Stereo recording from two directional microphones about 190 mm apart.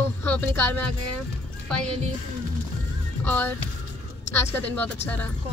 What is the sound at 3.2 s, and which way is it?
Speech, 10° left (ahead or behind).